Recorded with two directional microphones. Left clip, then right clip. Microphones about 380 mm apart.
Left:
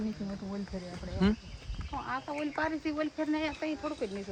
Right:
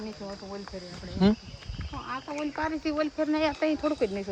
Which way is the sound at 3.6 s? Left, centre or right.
Right.